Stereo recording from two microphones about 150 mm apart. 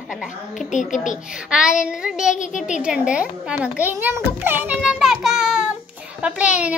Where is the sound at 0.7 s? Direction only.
55° left (ahead or behind).